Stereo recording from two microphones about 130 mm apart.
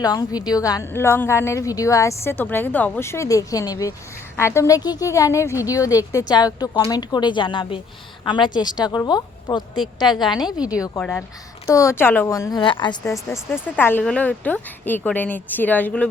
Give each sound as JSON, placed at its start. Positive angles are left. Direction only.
{"t": 0.0, "sound": "a woman's voice", "side_deg": 30}
{"t": 10.4, "sound": "a woman's voice", "side_deg": -10}
{"t": 10.8, "sound": "a woman's voice", "side_deg": 25}
{"t": 11.0, "sound": "a woman's voice", "side_deg": 10}
{"t": 11.7, "sound": "a woman's voice", "side_deg": 20}
{"t": 13.5, "sound": "a woman's voice", "side_deg": 15}